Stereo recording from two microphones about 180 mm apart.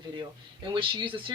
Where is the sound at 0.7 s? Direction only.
30° right (ahead or behind).